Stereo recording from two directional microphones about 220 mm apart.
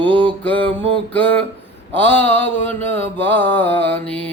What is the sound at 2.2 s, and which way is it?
Mantra, 10° left (ahead or behind).